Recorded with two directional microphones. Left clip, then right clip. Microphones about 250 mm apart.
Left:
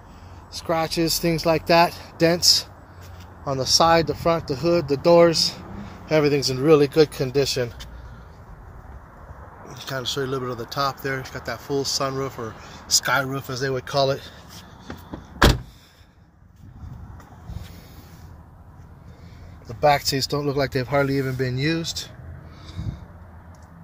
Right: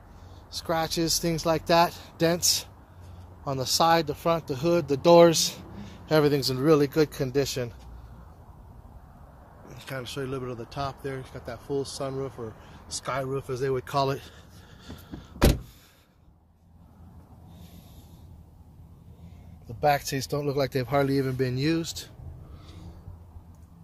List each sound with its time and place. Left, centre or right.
0.5 s speech: centre
2.4 s speech: right
3.4 s speech: centre
4.5 s speech: right
5.0 s speech: right
5.5 s a sound: right
6.5 s speech: centre
9.7 s speech: centre; by 14.3 s right
20.2 s speech: centre